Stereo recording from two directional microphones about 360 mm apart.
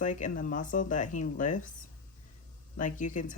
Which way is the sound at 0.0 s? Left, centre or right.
Left.